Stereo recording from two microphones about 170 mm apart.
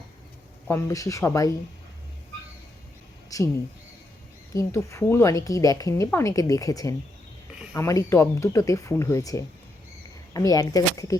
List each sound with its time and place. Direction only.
0.7 s speech: 20° left (ahead or behind)
3.2 s a sound: 20° left (ahead or behind)
4.5 s speech: 15° left (ahead or behind)